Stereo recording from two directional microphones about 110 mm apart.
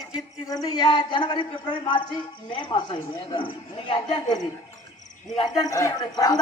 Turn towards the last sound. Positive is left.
turn(degrees=35)  # may be behind; listen again after turning